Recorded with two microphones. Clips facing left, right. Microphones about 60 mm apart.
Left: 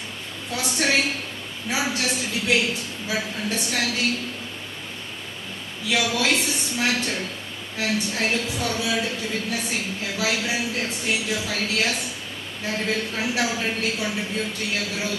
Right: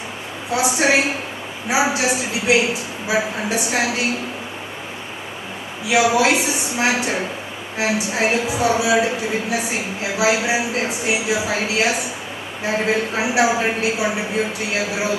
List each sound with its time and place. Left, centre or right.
0.5 s a woman's voice: centre
5.9 s a woman's voice: centre